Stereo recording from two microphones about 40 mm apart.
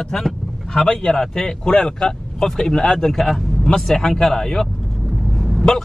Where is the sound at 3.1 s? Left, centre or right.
Centre.